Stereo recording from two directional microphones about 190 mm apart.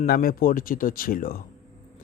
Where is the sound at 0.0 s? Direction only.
50° left (ahead or behind).